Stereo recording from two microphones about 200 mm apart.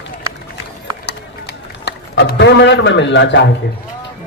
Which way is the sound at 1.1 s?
55° left (ahead or behind).